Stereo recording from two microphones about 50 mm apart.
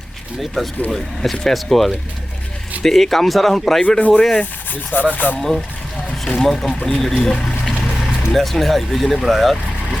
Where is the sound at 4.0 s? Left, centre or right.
Left.